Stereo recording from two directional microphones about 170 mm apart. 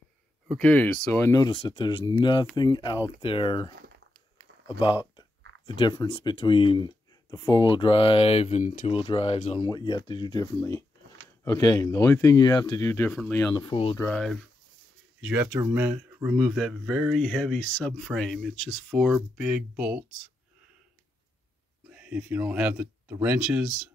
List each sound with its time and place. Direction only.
0.5 s speech: 5° left (ahead or behind); by 3.7 s 30° left (ahead or behind)
5.7 s speech: 25° left (ahead or behind)
9.7 s speech: 25° left (ahead or behind)
13.9 s speech: 5° left (ahead or behind)
15.2 s speech: 10° right (ahead or behind)
21.8 s speech: 5° right (ahead or behind)